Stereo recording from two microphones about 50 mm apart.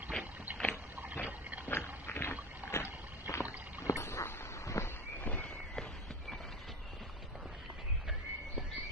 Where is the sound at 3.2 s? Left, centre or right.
Left.